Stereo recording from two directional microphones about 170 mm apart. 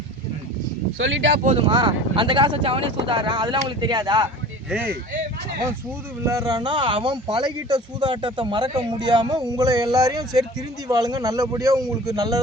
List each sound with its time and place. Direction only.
1.0 s speech: 90° right
1.6 s speech: 25° right (ahead or behind)
6.2 s speech: 20° right (ahead or behind)